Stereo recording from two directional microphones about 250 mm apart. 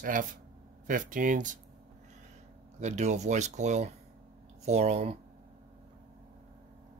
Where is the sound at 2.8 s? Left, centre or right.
Right.